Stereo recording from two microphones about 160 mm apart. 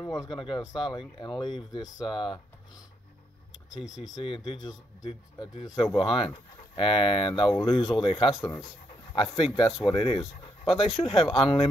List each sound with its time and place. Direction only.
0.0 s speech: 25° left (ahead or behind)
4.1 s speech: 30° left (ahead or behind)
8.4 s speech: 20° left (ahead or behind)
9.4 s speech: 30° left (ahead or behind)